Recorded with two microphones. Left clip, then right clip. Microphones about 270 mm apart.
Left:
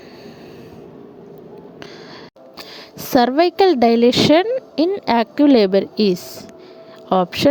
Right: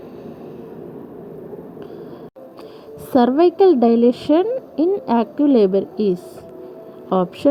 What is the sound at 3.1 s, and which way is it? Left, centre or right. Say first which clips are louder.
A woman's voice: even; left.